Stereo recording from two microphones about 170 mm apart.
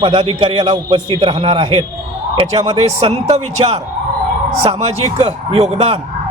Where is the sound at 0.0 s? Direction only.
30° right (ahead or behind).